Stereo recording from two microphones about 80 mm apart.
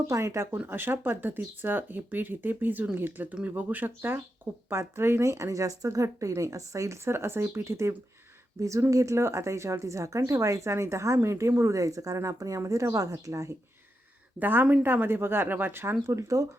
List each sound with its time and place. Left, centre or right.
0.1 s speech: right
0.7 s speech: right
14.3 s speech: right